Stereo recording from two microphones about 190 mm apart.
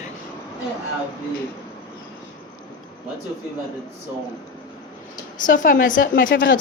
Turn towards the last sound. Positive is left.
turn(degrees=45)  # may be behind; listen again after turning